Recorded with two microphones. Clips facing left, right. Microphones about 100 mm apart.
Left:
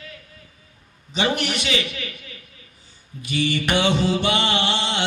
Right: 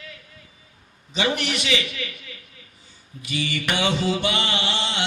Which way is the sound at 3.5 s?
30° left (ahead or behind).